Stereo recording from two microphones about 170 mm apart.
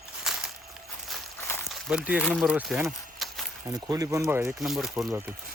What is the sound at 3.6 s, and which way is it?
Speech, 20° right (ahead or behind).